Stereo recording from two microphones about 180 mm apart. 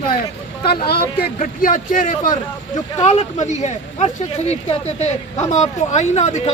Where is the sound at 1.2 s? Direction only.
50° left (ahead or behind).